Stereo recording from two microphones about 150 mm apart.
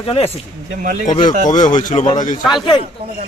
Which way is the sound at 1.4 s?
55° left (ahead or behind).